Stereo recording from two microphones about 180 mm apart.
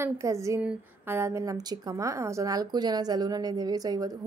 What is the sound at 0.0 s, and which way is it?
A woman's voice, 15° right (ahead or behind).